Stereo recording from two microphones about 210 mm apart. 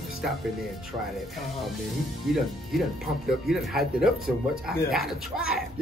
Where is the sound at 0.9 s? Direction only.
25° right (ahead or behind).